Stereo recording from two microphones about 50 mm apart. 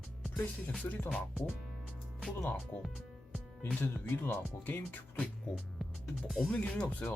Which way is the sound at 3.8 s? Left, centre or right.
Left.